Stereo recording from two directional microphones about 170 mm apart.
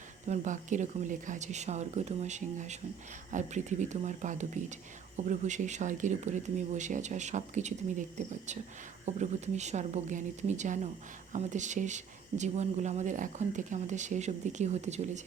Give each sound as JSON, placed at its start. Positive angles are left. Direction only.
{"t": 0.3, "sound": "speech", "side_deg": -45}